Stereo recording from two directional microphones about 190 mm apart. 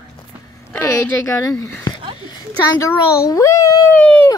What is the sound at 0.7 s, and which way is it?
Speech, 15° left (ahead or behind).